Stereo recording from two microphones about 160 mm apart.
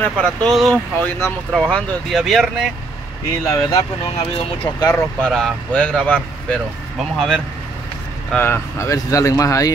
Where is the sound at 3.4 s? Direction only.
25° left (ahead or behind).